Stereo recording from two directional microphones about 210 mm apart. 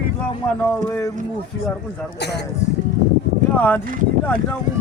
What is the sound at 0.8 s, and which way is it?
Speech, 10° left (ahead or behind).